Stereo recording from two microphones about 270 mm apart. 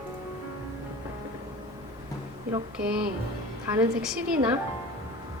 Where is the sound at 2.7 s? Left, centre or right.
Centre.